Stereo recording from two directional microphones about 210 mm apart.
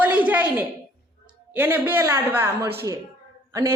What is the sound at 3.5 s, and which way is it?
Speech, 15° right (ahead or behind).